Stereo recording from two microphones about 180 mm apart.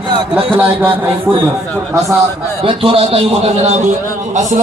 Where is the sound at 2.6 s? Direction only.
30° right (ahead or behind).